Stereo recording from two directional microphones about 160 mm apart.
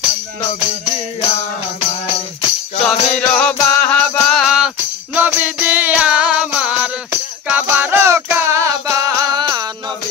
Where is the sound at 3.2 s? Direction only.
5° left (ahead or behind); by 9.7 s 25° right (ahead or behind).